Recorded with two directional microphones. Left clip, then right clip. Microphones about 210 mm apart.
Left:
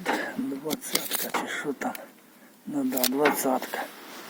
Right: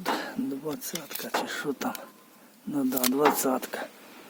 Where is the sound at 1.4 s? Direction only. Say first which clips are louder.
Right 1 dB; 20° right (ahead or behind).